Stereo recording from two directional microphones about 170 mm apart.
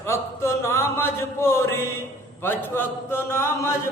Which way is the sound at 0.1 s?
15° left (ahead or behind).